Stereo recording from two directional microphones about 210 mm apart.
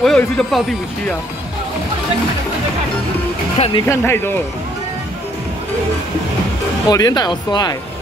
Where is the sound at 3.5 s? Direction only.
30° left (ahead or behind).